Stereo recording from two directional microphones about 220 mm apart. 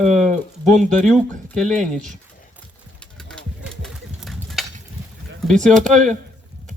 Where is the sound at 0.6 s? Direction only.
5° left (ahead or behind).